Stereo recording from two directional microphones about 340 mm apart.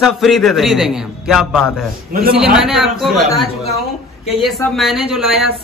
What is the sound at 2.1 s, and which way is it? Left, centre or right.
Speech, right.